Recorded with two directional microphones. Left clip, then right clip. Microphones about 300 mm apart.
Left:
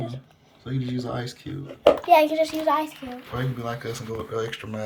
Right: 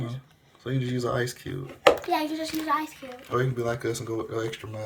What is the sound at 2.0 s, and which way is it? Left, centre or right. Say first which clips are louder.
Speech: left 10 dB; left.